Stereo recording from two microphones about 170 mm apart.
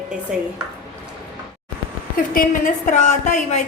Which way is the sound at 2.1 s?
55° left (ahead or behind).